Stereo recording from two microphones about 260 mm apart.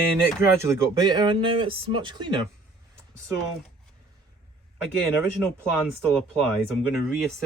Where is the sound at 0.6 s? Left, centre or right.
Centre.